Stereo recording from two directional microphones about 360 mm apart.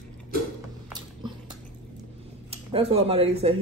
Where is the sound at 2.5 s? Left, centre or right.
Centre.